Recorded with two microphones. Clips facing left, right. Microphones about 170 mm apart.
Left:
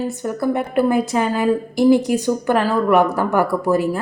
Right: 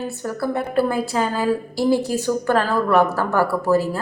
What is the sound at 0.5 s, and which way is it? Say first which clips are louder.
A woman's voice: left 3 dB; 15° left (ahead or behind).